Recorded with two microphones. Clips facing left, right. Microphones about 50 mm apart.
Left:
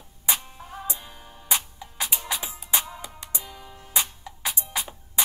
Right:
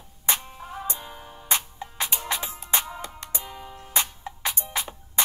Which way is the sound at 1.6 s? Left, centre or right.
Right.